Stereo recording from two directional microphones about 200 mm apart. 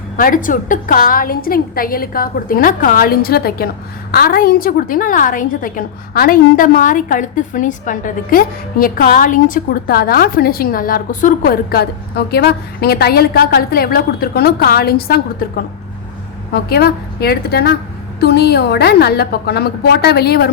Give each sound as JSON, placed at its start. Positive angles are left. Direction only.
{"t": 0.2, "sound": "a woman's voice", "side_deg": 45}
{"t": 16.5, "sound": "a woman's voice", "side_deg": 50}